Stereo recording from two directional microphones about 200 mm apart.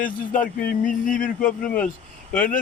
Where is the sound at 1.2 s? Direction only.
5° left (ahead or behind).